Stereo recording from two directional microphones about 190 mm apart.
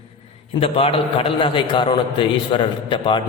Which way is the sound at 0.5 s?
30° left (ahead or behind).